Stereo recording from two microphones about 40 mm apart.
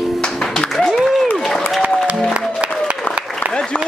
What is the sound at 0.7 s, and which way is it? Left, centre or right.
Applause, centre.